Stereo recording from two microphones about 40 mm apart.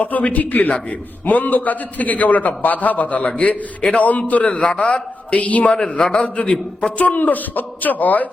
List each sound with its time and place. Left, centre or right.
0.0 s a man's voice: left
4.4 s a man's voice: left
5.3 s a man's voice: left
5.7 s a man's voice: centre
6.1 s a man's voice: left